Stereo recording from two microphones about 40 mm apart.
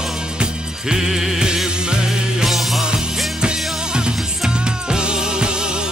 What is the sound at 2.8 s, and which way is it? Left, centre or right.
Music, centre.